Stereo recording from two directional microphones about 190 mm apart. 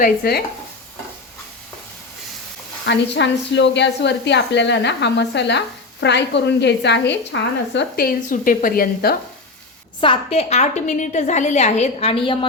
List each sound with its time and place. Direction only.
0.0 s a woman's voice: 55° left (ahead or behind)
2.8 s a woman's voice: 70° left (ahead or behind); by 9.1 s 55° left (ahead or behind)
10.0 s a woman's voice: 30° left (ahead or behind)